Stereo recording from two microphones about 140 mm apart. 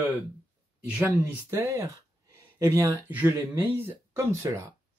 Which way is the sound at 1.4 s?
20° right (ahead or behind).